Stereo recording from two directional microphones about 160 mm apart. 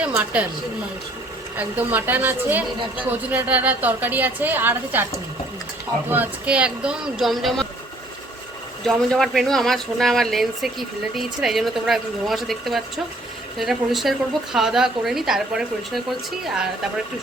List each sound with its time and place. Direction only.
0.0 s a woman's voice: 10° right (ahead or behind)
1.5 s a woman's voice: 10° right (ahead or behind)
6.1 s a woman's voice: 10° right (ahead or behind)
8.9 s speech: centre (ahead or behind)